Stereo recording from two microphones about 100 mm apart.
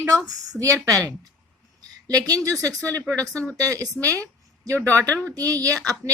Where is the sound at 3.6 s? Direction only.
35° right (ahead or behind).